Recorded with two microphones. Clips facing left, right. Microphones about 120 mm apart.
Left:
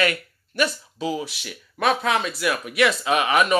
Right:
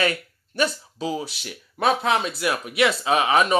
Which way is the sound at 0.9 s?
30° right (ahead or behind).